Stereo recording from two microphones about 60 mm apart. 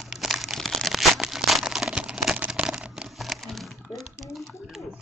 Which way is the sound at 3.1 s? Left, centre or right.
Centre.